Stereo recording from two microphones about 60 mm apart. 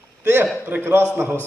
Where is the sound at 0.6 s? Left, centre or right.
Right.